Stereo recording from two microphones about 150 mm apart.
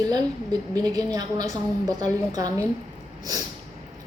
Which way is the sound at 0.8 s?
25° right (ahead or behind).